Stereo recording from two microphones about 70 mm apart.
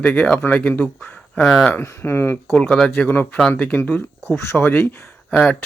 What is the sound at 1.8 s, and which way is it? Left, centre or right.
Speech, left.